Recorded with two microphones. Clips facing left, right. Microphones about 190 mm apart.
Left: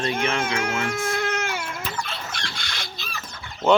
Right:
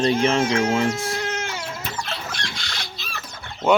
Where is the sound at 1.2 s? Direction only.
55° left (ahead or behind).